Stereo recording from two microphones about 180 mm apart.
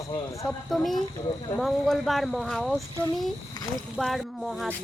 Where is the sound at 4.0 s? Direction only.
Centre (ahead or behind).